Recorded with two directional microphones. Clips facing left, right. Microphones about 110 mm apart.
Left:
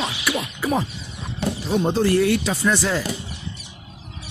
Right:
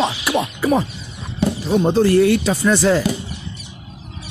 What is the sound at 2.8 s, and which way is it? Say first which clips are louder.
Speech: right 7 dB; 60° right (ahead or behind).